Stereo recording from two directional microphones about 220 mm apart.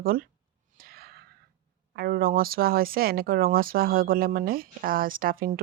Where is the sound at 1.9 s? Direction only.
45° right (ahead or behind).